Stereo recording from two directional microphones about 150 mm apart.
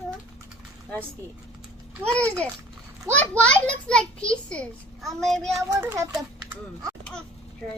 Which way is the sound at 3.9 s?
5° left (ahead or behind).